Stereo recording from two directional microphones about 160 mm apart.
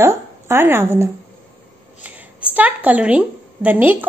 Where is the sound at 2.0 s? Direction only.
10° right (ahead or behind).